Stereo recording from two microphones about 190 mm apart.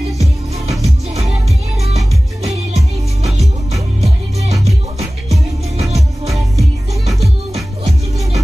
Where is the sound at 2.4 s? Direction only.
35° right (ahead or behind).